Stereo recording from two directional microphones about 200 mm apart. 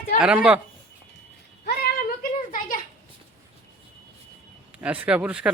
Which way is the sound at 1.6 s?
50° left (ahead or behind).